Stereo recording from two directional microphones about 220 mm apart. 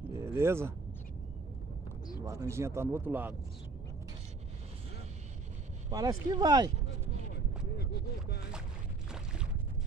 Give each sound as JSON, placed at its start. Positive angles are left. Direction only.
{"t": 0.0, "sound": "zipper", "side_deg": -10}
{"t": 2.2, "sound": "speech", "side_deg": -15}
{"t": 5.9, "sound": "speech", "side_deg": -15}
{"t": 7.7, "sound": "a sound", "side_deg": 45}